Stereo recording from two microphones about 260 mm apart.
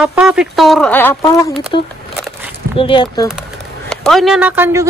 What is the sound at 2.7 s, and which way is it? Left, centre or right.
Speech, centre.